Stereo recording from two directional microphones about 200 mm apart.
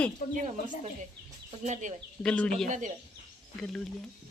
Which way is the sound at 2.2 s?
5° left (ahead or behind).